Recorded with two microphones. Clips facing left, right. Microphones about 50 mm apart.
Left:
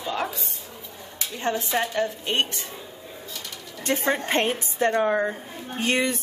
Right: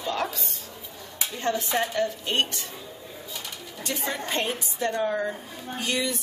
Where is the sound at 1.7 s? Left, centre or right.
Centre.